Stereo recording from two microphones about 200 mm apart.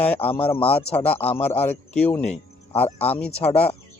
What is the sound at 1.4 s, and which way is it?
A man's voice, 10° left (ahead or behind).